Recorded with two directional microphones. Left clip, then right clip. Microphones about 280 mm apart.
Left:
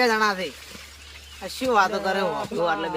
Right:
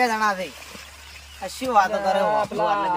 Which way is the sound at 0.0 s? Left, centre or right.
Centre.